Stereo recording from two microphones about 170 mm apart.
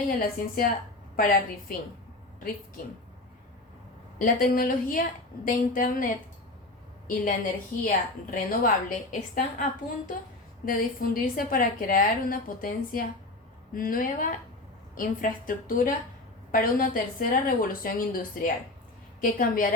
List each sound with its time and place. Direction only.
0.2 s a woman's voice: 55° left (ahead or behind)
4.2 s a woman's voice: 55° left (ahead or behind)
7.1 s a woman's voice: 55° left (ahead or behind)
10.7 s a woman's voice: 55° left (ahead or behind)